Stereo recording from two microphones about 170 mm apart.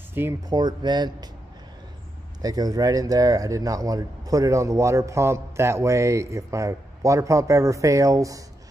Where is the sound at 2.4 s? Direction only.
20° right (ahead or behind).